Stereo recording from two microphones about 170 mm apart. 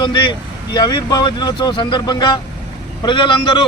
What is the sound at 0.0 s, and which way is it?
A man's voice, 25° left (ahead or behind).